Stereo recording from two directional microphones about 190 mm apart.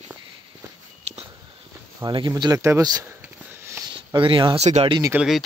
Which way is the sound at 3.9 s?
25° right (ahead or behind).